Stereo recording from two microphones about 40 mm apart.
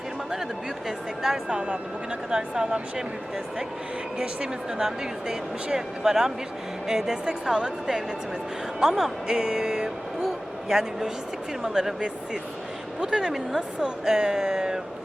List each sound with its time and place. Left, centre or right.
0.9 s speech: centre
1.5 s a woman's voice: right
4.8 s speech: centre
8.8 s a woman's voice: centre